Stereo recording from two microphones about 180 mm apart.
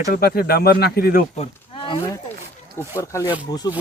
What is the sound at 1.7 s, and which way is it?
Wild animals, 25° left (ahead or behind).